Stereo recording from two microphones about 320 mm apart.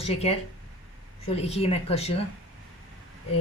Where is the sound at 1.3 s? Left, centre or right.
Centre.